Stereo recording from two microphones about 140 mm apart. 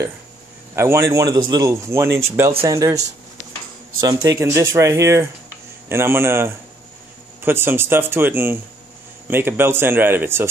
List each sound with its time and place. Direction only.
0.7 s speech: 20° right (ahead or behind)